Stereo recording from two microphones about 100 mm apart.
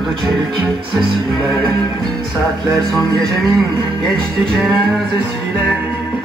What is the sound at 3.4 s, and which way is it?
Music, centre (ahead or behind).